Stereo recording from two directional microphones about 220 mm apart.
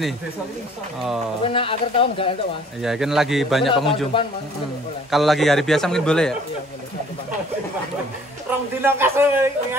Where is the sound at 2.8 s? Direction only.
Centre (ahead or behind).